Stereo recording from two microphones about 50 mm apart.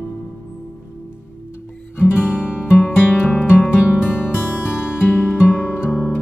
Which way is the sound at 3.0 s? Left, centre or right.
Left.